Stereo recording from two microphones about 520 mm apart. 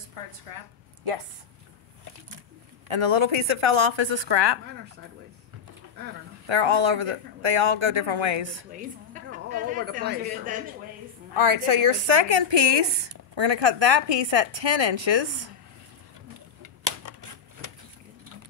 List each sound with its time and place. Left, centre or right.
0.5 s a woman's voice: right
2.9 s a woman's voice: right
6.4 s a woman's voice: right
8.7 s a woman's voice: centre
11.3 s a woman's voice: right
16.6 s typewriter: right